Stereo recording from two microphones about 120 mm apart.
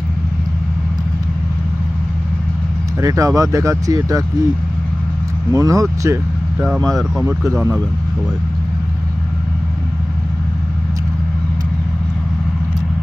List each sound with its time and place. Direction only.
3.0 s speech: 25° right (ahead or behind)
5.5 s speech: 30° right (ahead or behind)
6.6 s speech: centre (ahead or behind)